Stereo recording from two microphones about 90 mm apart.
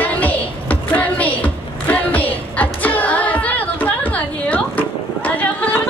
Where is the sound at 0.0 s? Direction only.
20° left (ahead or behind).